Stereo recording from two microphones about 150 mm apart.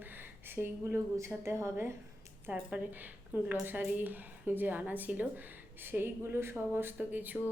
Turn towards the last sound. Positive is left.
turn(degrees=-10)  # may be behind; listen again after turning